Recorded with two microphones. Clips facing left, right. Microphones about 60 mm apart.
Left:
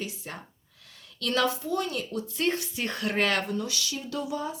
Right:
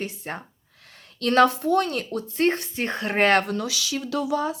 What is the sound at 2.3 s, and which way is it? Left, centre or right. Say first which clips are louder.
Speech: right 7 dB; right.